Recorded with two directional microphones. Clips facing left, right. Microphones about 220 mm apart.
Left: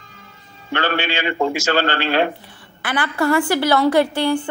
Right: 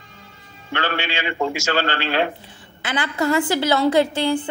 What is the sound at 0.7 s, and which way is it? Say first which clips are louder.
A man's voice: left 3 dB; 50° left (ahead or behind).